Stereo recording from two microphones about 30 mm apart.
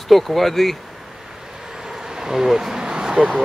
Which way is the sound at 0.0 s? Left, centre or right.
Centre.